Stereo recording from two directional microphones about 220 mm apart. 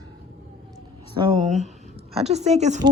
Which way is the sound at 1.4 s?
30° right (ahead or behind).